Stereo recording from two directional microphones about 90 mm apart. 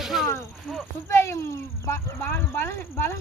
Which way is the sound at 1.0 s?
30° left (ahead or behind).